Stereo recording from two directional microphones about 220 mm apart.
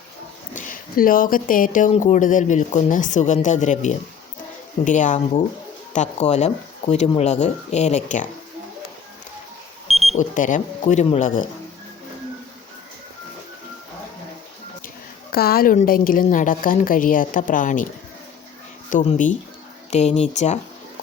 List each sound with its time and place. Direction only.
0.5 s speech: 35° left (ahead or behind)
9.8 s alarm clock: centre (ahead or behind)
10.2 s speech: 35° left (ahead or behind)
15.3 s speech: 45° left (ahead or behind)
18.9 s speech: 35° left (ahead or behind)